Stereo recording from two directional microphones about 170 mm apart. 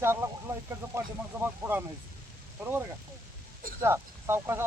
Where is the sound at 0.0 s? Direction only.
15° right (ahead or behind).